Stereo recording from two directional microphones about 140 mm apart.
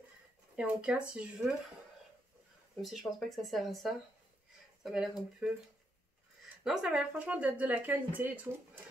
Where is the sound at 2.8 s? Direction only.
Centre (ahead or behind).